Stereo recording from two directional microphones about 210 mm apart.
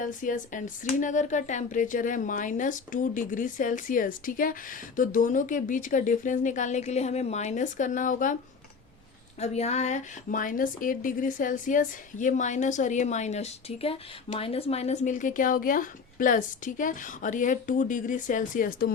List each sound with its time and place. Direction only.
0.0 s a woman's voice: 40° left (ahead or behind)
9.4 s a woman's voice: 30° left (ahead or behind)